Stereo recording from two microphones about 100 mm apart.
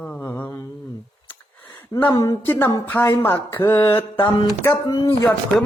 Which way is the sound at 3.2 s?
25° left (ahead or behind).